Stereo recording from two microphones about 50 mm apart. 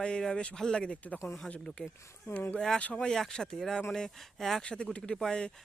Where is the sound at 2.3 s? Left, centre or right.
Left.